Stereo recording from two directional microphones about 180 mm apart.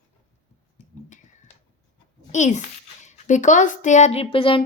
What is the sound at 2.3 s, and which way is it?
A child's voice, 40° left (ahead or behind).